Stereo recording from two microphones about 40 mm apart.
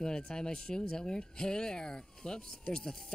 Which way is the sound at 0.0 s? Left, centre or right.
Centre.